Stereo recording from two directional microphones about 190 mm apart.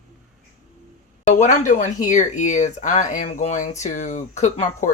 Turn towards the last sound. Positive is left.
turn(degrees=35)  # may be behind; listen again after turning